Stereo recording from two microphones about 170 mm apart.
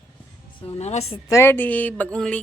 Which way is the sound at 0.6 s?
35° left (ahead or behind).